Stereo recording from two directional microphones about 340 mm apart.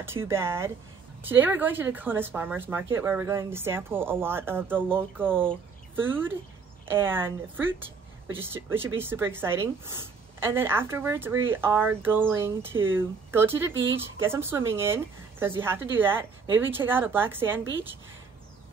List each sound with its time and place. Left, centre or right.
0.0 s speech: centre